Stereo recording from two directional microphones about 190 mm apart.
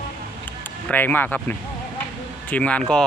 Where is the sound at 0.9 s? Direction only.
10° left (ahead or behind).